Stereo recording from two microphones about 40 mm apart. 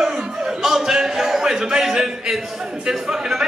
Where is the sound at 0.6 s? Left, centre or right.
Centre.